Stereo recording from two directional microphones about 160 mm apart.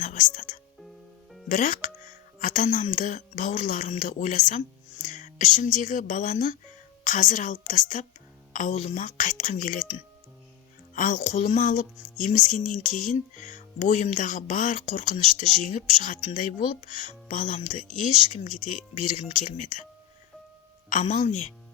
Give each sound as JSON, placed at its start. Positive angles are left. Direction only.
{"t": 0.0, "sound": "speech", "side_deg": 55}
{"t": 10.9, "sound": "speech", "side_deg": 55}
{"t": 20.9, "sound": "speech", "side_deg": 50}